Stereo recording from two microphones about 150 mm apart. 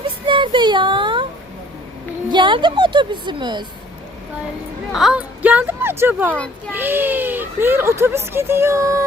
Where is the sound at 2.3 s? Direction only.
30° right (ahead or behind).